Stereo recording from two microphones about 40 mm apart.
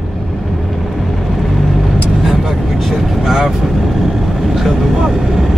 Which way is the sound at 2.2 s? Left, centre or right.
Centre.